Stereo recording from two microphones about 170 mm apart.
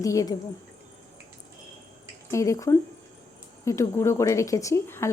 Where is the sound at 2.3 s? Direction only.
20° left (ahead or behind).